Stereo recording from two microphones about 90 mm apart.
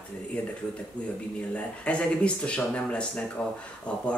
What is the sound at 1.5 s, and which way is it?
Speech, 15° left (ahead or behind).